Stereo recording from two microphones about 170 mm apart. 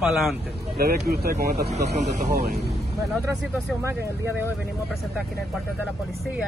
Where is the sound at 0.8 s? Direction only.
65° right (ahead or behind).